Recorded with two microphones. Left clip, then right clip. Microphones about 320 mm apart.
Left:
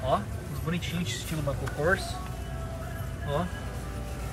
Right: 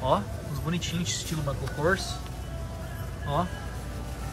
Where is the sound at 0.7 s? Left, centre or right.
Centre.